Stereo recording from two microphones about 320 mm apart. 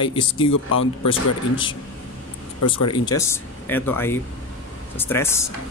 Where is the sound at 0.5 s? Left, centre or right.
Left.